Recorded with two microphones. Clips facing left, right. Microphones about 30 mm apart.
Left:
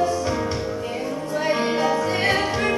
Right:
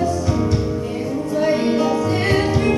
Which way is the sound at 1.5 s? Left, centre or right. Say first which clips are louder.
Right 3 dB; left.